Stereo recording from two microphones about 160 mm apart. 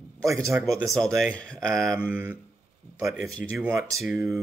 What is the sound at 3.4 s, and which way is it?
Speech, 15° right (ahead or behind).